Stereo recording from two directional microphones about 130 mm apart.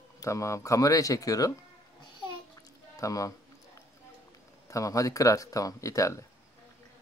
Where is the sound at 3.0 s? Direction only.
25° left (ahead or behind).